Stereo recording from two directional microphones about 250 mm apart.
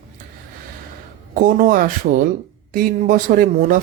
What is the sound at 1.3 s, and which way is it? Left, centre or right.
Speech, right.